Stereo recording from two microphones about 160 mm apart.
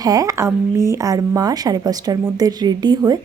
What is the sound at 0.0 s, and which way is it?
Speech, 20° right (ahead or behind).